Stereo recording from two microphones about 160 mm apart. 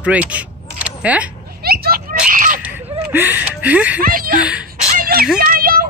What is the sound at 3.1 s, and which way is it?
Speech, 10° right (ahead or behind).